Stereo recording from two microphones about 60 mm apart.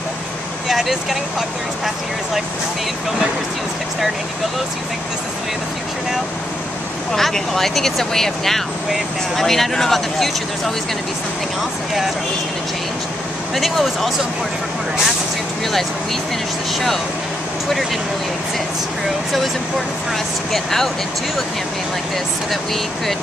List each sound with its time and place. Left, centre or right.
0.7 s speech: centre
7.1 s speech: centre
13.6 s speech: centre
20.5 s speech: centre